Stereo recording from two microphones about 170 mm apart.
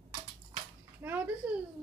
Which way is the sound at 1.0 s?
10° right (ahead or behind).